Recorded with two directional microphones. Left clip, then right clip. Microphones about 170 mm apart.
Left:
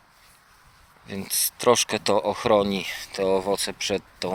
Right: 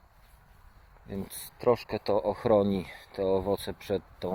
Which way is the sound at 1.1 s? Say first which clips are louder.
Left 5 dB; 10° right (ahead or behind).